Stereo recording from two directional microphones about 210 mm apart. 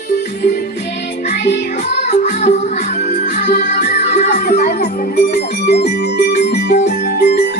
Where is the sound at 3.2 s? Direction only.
35° left (ahead or behind).